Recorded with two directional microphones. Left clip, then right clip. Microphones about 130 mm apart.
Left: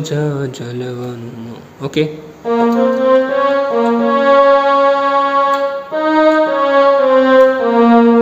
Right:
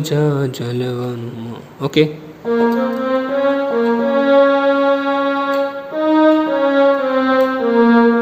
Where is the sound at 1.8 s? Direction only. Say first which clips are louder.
Right 2 dB; 10° right (ahead or behind).